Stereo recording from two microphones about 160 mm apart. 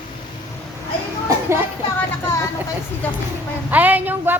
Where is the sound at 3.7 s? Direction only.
10° right (ahead or behind).